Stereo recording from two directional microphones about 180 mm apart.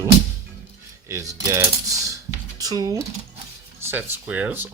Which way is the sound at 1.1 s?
15° right (ahead or behind).